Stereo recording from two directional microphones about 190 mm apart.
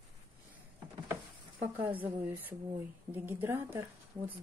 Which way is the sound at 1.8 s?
30° right (ahead or behind).